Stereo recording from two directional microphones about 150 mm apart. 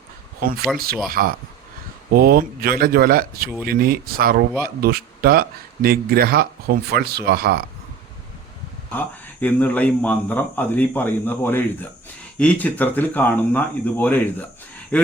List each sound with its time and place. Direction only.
0.3 s speech: 90° right
1.1 s speech: 75° right (ahead or behind)
2.1 s speech: 85° right
4.6 s speech: 90° right
9.0 s speech: 10° left (ahead or behind)